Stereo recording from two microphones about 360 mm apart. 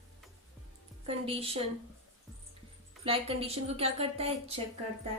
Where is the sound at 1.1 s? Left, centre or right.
Centre.